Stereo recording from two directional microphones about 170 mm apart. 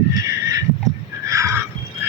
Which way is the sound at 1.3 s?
20° right (ahead or behind).